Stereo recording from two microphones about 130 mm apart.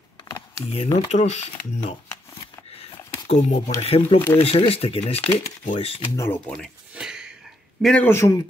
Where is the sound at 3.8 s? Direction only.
50° left (ahead or behind).